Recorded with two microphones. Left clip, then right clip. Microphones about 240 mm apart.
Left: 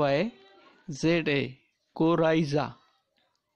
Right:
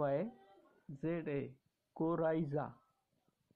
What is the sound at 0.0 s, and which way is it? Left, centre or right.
Speech, left.